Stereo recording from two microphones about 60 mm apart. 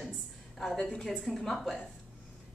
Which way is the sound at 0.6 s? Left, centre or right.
Centre.